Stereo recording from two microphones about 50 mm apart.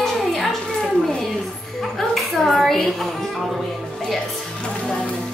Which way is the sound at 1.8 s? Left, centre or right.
Centre.